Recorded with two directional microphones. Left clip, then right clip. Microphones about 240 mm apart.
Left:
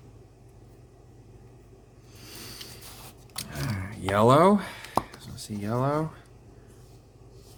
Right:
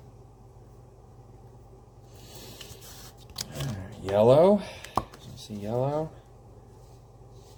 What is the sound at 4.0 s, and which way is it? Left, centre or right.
Speech, left.